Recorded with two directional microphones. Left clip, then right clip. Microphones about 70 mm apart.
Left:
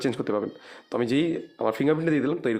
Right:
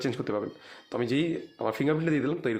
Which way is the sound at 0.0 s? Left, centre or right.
Left.